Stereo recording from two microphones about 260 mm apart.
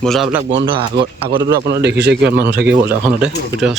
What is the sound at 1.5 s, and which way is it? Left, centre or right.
Speech, right.